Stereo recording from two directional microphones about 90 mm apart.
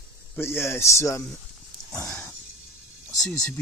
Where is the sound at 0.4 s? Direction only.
30° left (ahead or behind).